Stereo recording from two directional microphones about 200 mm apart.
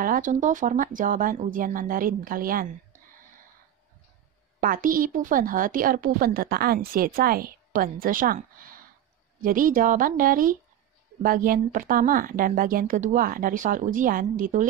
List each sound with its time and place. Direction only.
0.0 s a woman's voice: 40° right (ahead or behind)
4.6 s a woman's voice: 45° right (ahead or behind)